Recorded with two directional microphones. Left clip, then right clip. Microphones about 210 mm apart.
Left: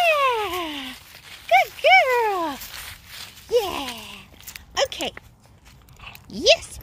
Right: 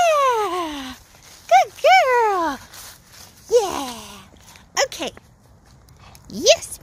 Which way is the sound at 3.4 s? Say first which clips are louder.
Right 4 dB; 15° right (ahead or behind).